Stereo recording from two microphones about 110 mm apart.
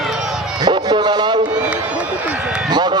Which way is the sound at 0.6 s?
40° right (ahead or behind).